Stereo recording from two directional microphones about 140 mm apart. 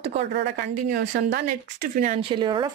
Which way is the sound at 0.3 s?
80° right.